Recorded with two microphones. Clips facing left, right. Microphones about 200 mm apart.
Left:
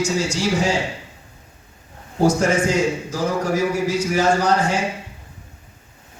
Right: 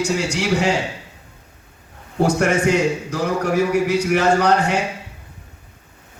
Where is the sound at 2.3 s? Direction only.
65° right (ahead or behind).